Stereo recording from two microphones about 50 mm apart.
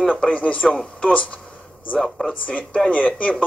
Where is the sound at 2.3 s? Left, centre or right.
Left.